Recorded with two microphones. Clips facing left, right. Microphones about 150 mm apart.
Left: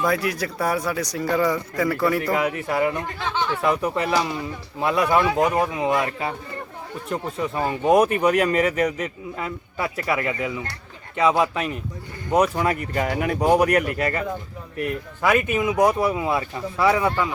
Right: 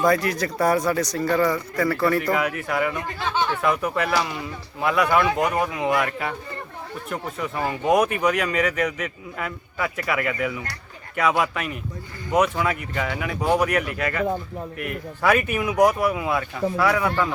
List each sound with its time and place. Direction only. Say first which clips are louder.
0.0 s speech: right 2 dB; 5° left (ahead or behind)
2.3 s a man's voice: left 1 dB; 25° left (ahead or behind)
5.3 s speech: left 2 dB; centre (ahead or behind)
5.5 s a man's voice: left 1 dB; 25° left (ahead or behind)
15.2 s speech: left 1 dB; 20° left (ahead or behind)